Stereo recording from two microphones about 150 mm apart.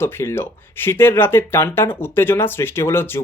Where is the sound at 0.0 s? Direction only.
15° left (ahead or behind).